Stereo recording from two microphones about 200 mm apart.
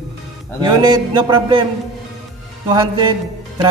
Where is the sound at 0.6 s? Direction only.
20° right (ahead or behind).